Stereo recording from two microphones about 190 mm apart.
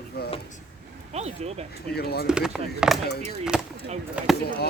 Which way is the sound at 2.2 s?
5° right (ahead or behind).